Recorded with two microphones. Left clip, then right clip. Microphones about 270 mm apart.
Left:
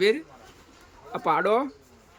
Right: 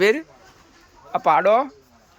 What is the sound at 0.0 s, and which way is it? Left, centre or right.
A man's voice, centre.